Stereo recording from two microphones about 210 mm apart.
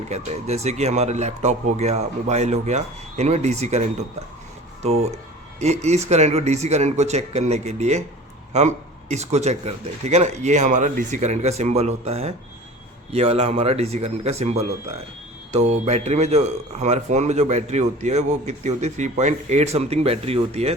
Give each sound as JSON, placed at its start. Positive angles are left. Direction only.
{"t": 0.1, "sound": "speech", "side_deg": -30}
{"t": 5.5, "sound": "speech", "side_deg": -30}